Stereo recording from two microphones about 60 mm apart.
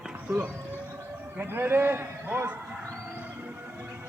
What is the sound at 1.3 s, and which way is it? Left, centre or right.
A man's voice, right.